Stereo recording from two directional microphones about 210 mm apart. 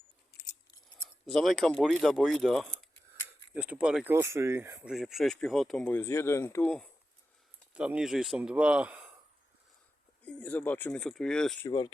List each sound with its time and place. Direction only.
0.3 s scissors: 50° left (ahead or behind)
1.3 s speech: centre (ahead or behind)
4.9 s speech: centre (ahead or behind)
10.2 s speech: 5° left (ahead or behind)